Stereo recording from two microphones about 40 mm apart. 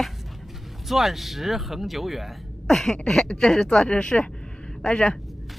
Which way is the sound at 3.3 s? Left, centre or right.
Left.